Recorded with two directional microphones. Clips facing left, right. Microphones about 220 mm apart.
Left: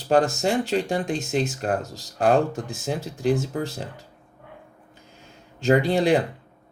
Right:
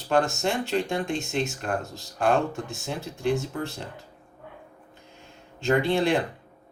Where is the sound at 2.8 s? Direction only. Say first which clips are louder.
Left 4 dB; 35° left (ahead or behind).